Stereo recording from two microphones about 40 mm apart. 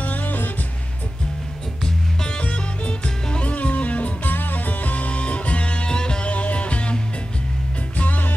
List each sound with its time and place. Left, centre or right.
0.0 s music: left
2.2 s music: left
3.5 s music: left
6.3 s music: left